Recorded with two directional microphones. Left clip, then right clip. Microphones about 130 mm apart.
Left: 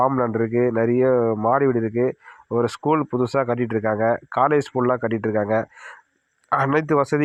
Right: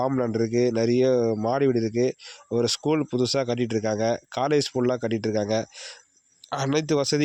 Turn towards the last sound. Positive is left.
turn(degrees=-5)  # may be behind; listen again after turning